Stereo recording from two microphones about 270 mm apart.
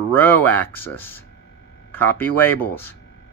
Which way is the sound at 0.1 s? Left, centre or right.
Centre.